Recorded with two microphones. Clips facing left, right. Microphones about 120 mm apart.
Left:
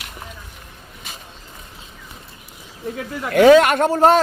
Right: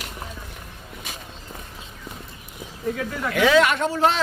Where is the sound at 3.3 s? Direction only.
45° left (ahead or behind).